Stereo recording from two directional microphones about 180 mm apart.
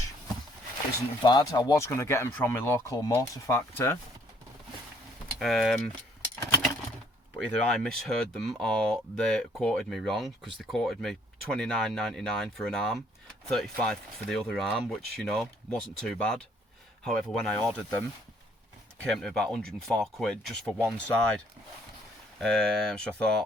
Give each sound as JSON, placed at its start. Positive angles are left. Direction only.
{"t": 1.2, "sound": "speech", "side_deg": 25}
{"t": 5.4, "sound": "speech", "side_deg": 0}
{"t": 7.3, "sound": "speech", "side_deg": 5}
{"t": 19.0, "sound": "speech", "side_deg": 5}